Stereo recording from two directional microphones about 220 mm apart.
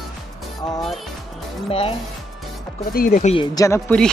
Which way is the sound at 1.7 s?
25° left (ahead or behind).